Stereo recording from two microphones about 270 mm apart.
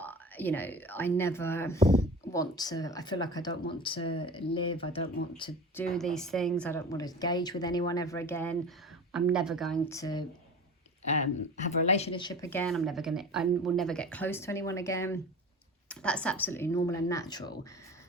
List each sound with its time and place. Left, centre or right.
0.0 s a woman's voice: centre
5.4 s a woman's voice: centre
9.9 s a woman's voice: centre
11.9 s a woman's voice: left